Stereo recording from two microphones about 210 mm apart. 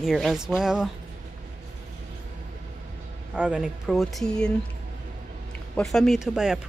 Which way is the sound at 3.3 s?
5° right (ahead or behind).